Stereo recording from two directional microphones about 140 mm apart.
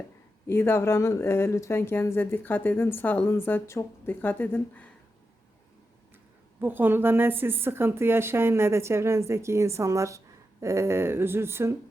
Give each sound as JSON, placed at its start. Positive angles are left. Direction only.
{"t": 0.4, "sound": "speech", "side_deg": 15}
{"t": 6.6, "sound": "a woman's voice", "side_deg": -15}